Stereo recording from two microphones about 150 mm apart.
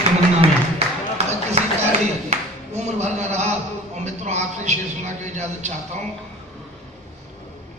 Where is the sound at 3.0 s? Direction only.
50° right (ahead or behind).